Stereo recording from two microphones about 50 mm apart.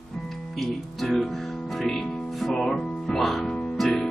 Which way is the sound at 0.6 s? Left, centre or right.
Centre.